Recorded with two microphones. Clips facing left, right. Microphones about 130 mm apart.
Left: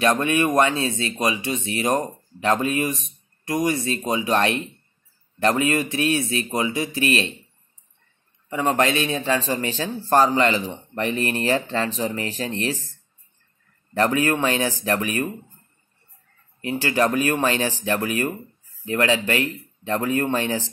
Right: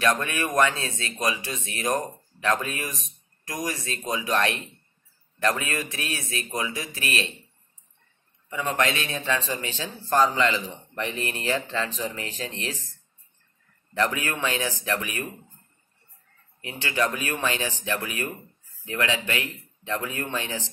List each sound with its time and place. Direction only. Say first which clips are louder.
0.0 s a man's voice: left 5 dB; 25° left (ahead or behind)
8.5 s a man's voice: left 5 dB; 35° left (ahead or behind)
13.9 s a man's voice: left 6 dB; 40° left (ahead or behind)
16.6 s a man's voice: left 6 dB; 35° left (ahead or behind)